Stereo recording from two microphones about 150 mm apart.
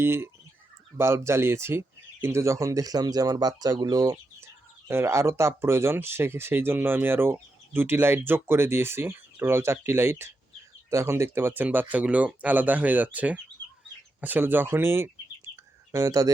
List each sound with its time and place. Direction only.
0.0 s speech: 15° right (ahead or behind)